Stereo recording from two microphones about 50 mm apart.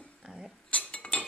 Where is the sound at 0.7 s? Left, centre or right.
Left.